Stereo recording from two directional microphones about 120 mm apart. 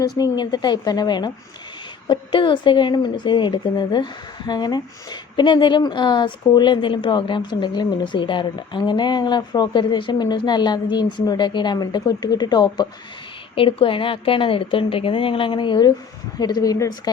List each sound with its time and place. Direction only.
0.0 s speech: 35° left (ahead or behind)
13.6 s a woman's voice: 50° left (ahead or behind); by 16.9 s 30° left (ahead or behind)